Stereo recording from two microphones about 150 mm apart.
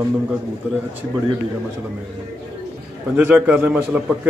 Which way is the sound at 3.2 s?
10° right (ahead or behind).